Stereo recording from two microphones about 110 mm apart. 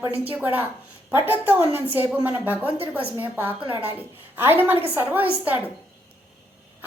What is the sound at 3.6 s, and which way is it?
Speech, 50° right (ahead or behind).